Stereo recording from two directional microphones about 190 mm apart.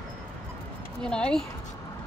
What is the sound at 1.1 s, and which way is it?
Speech, 5° left (ahead or behind).